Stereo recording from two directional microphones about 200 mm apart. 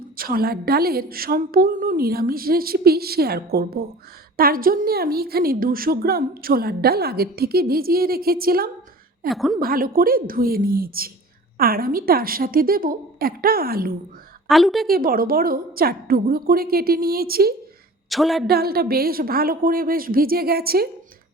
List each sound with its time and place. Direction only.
0.2 s a woman's voice: 45° right (ahead or behind)
9.3 s speech: centre (ahead or behind)
9.6 s a woman's voice: 45° right (ahead or behind)
14.4 s a woman's voice: centre (ahead or behind)
14.8 s a woman's voice: 45° right (ahead or behind)
18.1 s speech: centre (ahead or behind)
18.4 s a woman's voice: 50° right (ahead or behind)